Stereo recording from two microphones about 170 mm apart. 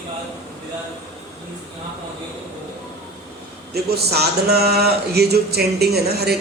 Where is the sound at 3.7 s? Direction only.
70° right (ahead or behind).